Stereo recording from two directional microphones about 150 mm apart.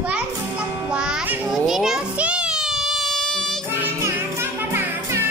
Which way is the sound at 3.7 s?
15° right (ahead or behind).